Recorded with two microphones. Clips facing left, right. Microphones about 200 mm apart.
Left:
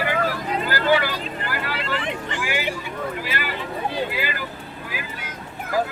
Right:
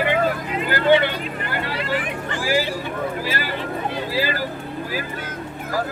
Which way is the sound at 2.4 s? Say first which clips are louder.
Right 8 dB; 35° right (ahead or behind).